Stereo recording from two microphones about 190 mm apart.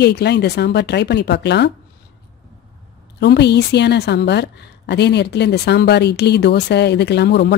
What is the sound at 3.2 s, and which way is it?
Speech, 65° left (ahead or behind).